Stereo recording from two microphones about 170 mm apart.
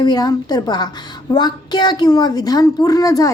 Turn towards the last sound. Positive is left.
turn(degrees=20)  # may be behind; listen again after turning